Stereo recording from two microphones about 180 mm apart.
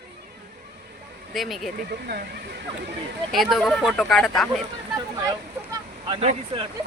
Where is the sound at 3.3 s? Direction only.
Centre (ahead or behind).